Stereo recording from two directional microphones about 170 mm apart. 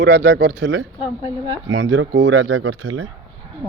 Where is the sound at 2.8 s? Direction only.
75° right (ahead or behind).